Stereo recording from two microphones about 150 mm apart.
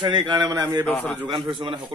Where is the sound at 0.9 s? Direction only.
Centre (ahead or behind).